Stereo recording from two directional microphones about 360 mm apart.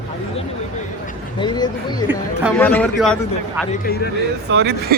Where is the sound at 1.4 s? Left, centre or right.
Centre.